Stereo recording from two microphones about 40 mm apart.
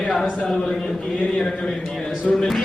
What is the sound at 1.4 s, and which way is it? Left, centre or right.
Speech, centre.